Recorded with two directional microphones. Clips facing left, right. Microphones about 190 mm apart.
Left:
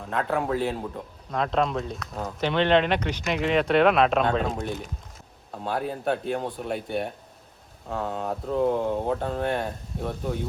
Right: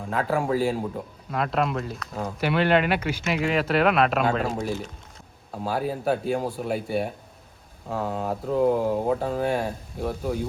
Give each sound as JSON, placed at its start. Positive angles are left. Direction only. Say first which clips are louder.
{"t": 0.0, "sound": "speech", "louder": "right 1 dB", "side_deg": -5}